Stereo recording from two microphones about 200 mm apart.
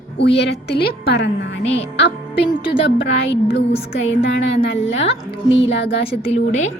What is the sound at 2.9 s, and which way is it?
Speech, 65° left (ahead or behind).